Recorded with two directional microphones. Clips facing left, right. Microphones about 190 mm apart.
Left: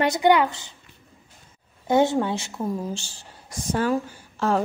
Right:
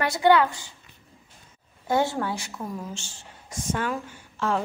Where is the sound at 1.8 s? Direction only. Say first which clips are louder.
Left 5 dB; 20° left (ahead or behind); by 4.6 s 40° left (ahead or behind).